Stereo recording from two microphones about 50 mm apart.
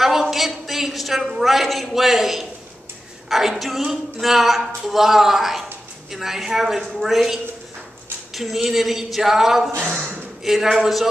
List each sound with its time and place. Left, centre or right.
0.0 s a woman's voice: centre
8.4 s a woman's voice: centre
9.8 s a sound: right
10.4 s a woman's voice: centre